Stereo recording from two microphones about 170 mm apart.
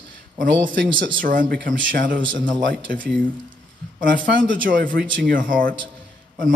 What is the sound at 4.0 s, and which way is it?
Speech, 55° right (ahead or behind).